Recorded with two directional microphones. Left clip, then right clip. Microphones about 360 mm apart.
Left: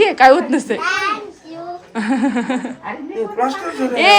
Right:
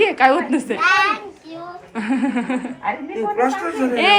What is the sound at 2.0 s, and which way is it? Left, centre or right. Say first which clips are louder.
Speech: left 3 dB; centre.